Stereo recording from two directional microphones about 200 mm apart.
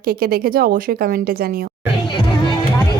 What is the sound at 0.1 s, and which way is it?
A woman's voice, 50° right (ahead or behind).